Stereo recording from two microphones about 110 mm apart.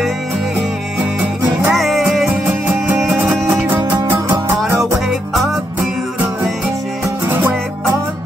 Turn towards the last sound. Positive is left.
turn(degrees=-20)  # may be behind; listen again after turning